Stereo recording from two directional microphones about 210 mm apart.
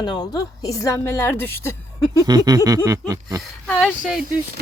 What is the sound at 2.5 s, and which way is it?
Speech, 15° right (ahead or behind).